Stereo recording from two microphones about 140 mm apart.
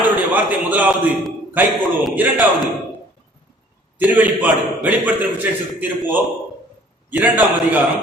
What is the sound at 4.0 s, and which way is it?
A man's voice, 10° right (ahead or behind).